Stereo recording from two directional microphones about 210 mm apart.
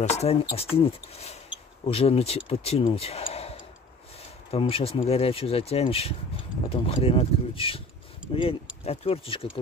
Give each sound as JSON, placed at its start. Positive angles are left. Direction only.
{"t": 0.0, "sound": "speech", "side_deg": 30}